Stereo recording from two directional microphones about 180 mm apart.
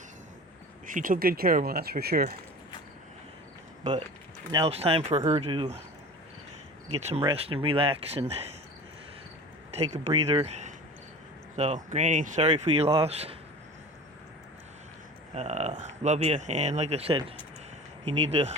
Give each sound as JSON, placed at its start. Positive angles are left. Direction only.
{"t": 0.9, "sound": "speech", "side_deg": -45}
{"t": 4.7, "sound": "speech", "side_deg": -35}
{"t": 6.9, "sound": "speech", "side_deg": -35}
{"t": 9.7, "sound": "speech", "side_deg": -35}
{"t": 15.4, "sound": "speech", "side_deg": -40}